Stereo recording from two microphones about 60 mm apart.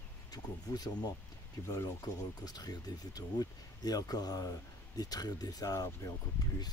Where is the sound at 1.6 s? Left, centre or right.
Left.